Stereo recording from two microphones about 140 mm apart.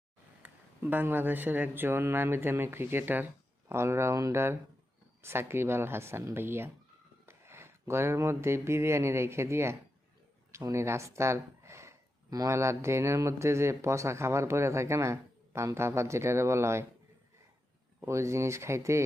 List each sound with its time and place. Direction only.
0.4 s speech: 15° right (ahead or behind)
18.0 s speech: 20° right (ahead or behind)